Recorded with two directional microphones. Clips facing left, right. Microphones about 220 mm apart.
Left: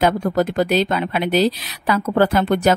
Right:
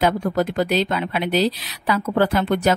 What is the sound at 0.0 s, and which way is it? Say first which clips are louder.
A woman's voice: left 2 dB; 45° left (ahead or behind).